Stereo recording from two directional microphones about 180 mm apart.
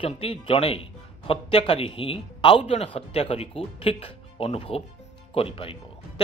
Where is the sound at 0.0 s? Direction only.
30° left (ahead or behind).